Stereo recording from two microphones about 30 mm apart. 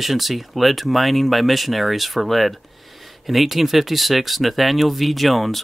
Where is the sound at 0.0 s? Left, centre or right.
Centre.